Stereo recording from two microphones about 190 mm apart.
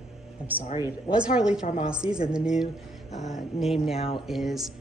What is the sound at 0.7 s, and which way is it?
Speech, 20° left (ahead or behind).